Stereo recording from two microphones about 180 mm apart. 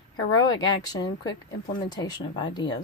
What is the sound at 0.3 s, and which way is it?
Speech, 20° left (ahead or behind).